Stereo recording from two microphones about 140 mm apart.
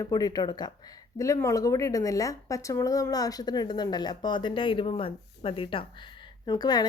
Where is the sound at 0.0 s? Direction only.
25° left (ahead or behind).